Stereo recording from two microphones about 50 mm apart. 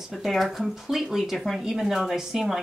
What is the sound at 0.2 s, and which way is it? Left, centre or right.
Speech, centre.